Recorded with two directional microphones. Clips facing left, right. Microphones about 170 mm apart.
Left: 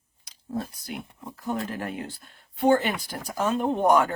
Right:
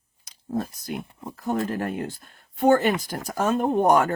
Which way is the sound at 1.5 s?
45° right (ahead or behind).